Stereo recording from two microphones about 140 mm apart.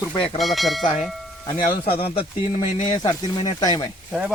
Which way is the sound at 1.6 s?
90° left.